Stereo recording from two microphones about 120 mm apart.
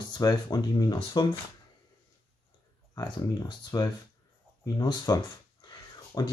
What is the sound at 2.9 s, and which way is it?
Speech, 35° left (ahead or behind).